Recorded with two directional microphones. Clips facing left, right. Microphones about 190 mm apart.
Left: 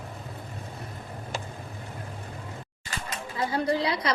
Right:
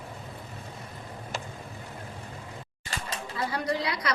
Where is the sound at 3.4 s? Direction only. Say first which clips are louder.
Left 4 dB; 25° left (ahead or behind).